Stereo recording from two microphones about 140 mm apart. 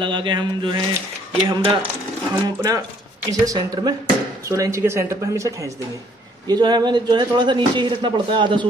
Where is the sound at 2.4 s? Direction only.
25° right (ahead or behind).